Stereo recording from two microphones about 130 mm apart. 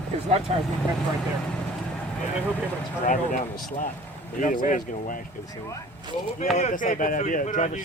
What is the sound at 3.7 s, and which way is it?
Speech, 90° left.